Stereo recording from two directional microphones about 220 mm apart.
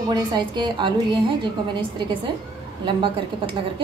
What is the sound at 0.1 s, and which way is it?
A woman's voice, 20° right (ahead or behind).